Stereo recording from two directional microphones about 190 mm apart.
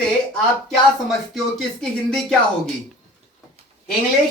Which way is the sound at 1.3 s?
5° left (ahead or behind).